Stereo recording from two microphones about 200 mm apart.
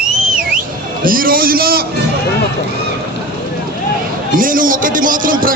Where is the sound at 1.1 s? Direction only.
45° right (ahead or behind).